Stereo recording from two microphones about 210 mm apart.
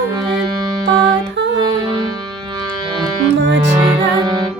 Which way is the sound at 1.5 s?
20° right (ahead or behind).